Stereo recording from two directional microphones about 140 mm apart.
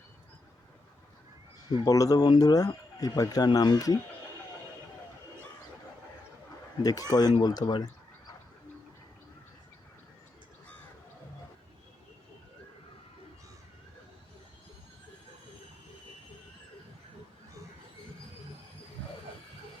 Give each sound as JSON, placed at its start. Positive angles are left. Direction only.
{"t": 1.7, "sound": "speech", "side_deg": 25}
{"t": 7.1, "sound": "speech", "side_deg": 25}
{"t": 7.6, "sound": "speech", "side_deg": 35}